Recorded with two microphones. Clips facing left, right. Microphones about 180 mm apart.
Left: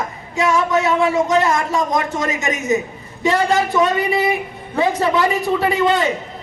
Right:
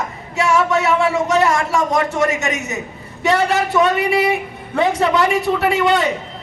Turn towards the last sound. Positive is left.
turn(degrees=-75)  # may be behind; listen again after turning